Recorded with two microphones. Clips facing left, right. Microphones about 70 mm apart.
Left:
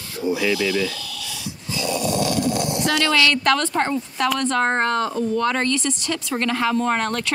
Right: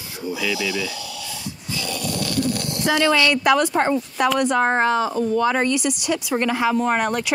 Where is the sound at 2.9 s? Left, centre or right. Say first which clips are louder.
Right 3 dB; right; by 5.5 s centre.